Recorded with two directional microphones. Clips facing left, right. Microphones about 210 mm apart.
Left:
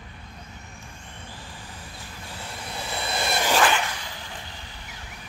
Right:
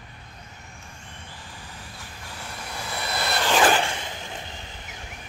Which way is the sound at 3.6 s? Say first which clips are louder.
Right 3 dB; 30° right (ahead or behind).